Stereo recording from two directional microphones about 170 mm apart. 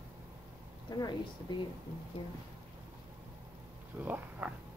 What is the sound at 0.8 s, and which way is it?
Speech, 25° left (ahead or behind).